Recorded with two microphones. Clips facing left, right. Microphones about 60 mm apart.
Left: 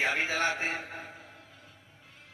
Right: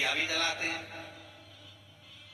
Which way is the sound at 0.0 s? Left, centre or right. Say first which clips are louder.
Left 3 dB; left.